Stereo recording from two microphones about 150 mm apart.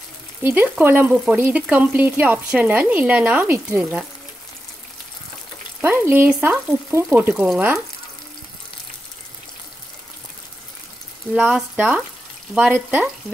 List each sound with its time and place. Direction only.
0.4 s frying: 15° right (ahead or behind)
5.8 s frying: 15° right (ahead or behind)
11.3 s frying: 5° right (ahead or behind)